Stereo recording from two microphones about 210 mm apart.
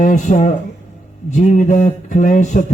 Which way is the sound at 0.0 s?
40° left (ahead or behind).